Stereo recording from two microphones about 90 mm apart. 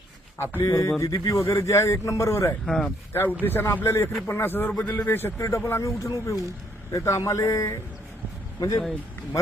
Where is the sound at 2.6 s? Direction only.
5° left (ahead or behind).